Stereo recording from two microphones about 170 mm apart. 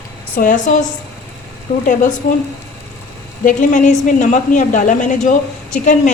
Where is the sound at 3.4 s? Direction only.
50° left (ahead or behind).